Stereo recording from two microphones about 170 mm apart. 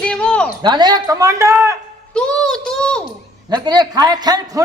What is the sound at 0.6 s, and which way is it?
Speech, 25° right (ahead or behind).